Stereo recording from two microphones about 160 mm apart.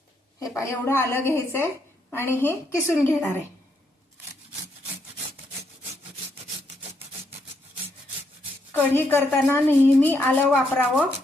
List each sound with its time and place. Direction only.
0.3 s a woman's voice: 20° left (ahead or behind)
8.7 s a woman's voice: 10° left (ahead or behind)